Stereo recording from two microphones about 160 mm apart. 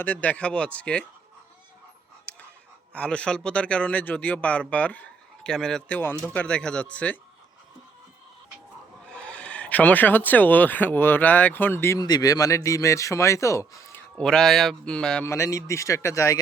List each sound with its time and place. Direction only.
0.0 s speech: 10° left (ahead or behind)
2.3 s pant: 5° left (ahead or behind)
2.9 s speech: 5° left (ahead or behind)
9.0 s speech: 5° left (ahead or behind)
14.2 s a man's voice: 5° left (ahead or behind)
15.3 s speech: 20° left (ahead or behind)